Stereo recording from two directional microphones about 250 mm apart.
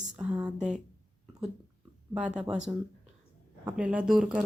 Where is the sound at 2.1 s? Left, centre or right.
Centre.